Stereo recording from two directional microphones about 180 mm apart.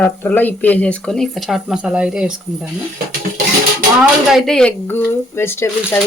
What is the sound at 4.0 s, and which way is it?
Speech, centre (ahead or behind).